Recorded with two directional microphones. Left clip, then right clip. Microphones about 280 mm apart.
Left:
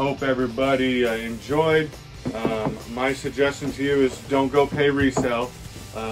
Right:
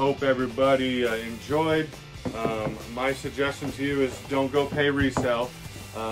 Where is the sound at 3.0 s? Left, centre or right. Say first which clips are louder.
Left 4 dB; centre.